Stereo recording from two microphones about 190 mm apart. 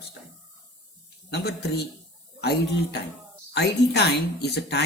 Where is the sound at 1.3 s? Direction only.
60° left (ahead or behind).